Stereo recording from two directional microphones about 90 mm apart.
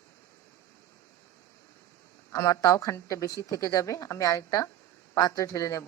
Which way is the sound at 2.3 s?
35° left (ahead or behind).